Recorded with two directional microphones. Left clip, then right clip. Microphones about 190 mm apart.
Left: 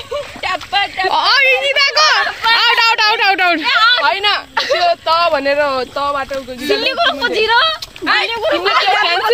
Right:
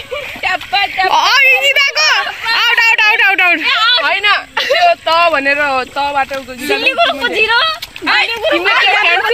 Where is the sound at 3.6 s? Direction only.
45° right (ahead or behind).